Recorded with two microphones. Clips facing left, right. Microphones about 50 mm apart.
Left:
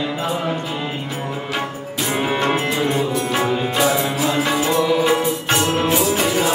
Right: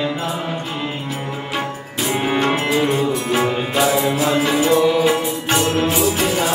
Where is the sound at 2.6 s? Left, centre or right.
Centre.